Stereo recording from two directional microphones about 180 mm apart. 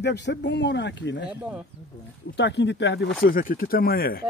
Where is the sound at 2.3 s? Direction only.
75° left (ahead or behind).